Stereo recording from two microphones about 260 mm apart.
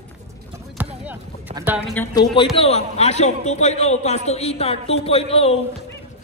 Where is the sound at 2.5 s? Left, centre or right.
Left.